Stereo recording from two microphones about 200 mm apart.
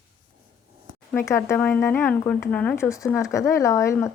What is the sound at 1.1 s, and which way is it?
Speech, 15° left (ahead or behind).